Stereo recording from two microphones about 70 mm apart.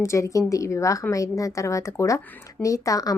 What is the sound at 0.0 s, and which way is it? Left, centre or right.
A woman's voice, left.